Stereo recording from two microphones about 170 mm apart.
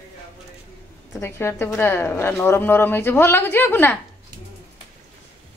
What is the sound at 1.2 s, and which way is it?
A woman's voice, 15° left (ahead or behind).